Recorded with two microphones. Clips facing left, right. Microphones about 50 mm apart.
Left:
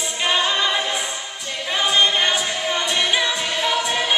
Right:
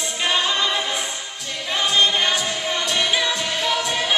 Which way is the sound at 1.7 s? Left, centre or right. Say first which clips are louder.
Left 1 dB; centre.